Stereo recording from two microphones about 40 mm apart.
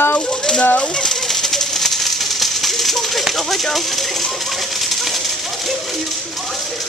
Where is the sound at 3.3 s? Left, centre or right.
Centre.